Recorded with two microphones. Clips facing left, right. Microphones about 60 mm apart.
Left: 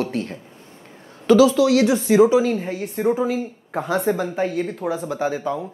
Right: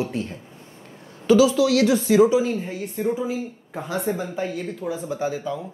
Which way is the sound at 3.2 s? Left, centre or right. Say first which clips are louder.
Left 4 dB; left.